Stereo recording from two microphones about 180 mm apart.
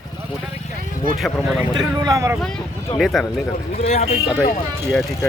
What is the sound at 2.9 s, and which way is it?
Speech, centre (ahead or behind).